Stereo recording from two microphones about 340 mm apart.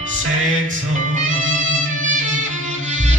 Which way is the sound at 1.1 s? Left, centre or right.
Right.